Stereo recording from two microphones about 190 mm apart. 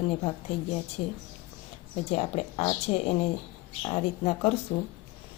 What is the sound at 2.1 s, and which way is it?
Speech, 30° left (ahead or behind).